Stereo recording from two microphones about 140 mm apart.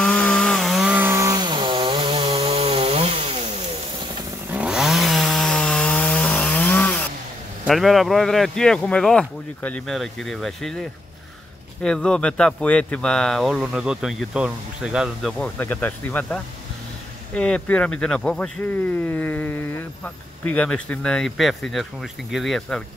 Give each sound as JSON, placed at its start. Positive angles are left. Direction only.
{"t": 0.0, "sound": "chainsaw", "side_deg": 10}
{"t": 0.9, "sound": "chainsaw", "side_deg": -20}
{"t": 4.5, "sound": "chainsaw", "side_deg": -5}
{"t": 7.6, "sound": "speech", "side_deg": 0}
{"t": 17.4, "sound": "speech", "side_deg": 5}